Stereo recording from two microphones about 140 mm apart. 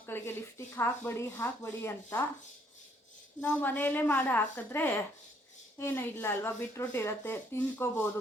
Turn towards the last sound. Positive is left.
turn(degrees=15)  # may be behind; listen again after turning